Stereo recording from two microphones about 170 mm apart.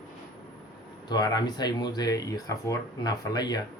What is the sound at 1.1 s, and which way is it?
Speech, 25° left (ahead or behind).